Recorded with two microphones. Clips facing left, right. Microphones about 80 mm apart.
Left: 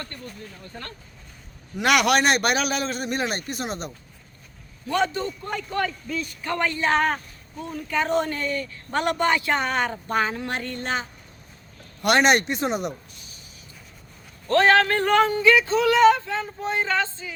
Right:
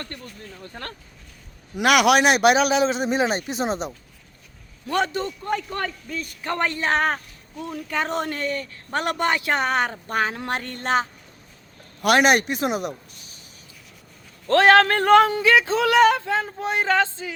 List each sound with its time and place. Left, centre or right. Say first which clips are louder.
0.7 s a man's voice: right 2 dB; right
1.7 s a man's voice: right 3 dB; centre
4.9 s a man's voice: even; right
5.5 s a man's voice: left 2 dB; right
7.6 s a man's voice: left 1 dB; right
12.0 s speech: right 1 dB; centre
14.4 s speech: right 3 dB; right